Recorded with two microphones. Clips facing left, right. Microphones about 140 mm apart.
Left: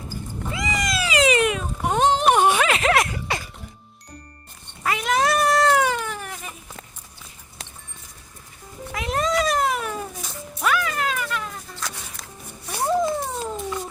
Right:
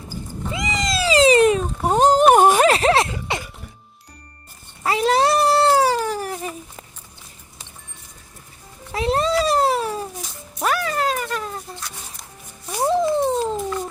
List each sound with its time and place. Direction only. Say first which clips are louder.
0.5 s cat: right 2 dB; 20° right (ahead or behind)
4.8 s cat: right 4 dB; 30° right (ahead or behind)
8.9 s a sound: right 4 dB; 30° right (ahead or behind)
10.6 s music: right 2 dB; 35° right (ahead or behind)
11.8 s a sound: left 2 dB; 90° left
12.7 s cat: right 3 dB; 20° right (ahead or behind)